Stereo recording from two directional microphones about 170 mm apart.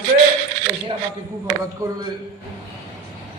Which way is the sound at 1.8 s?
20° right (ahead or behind).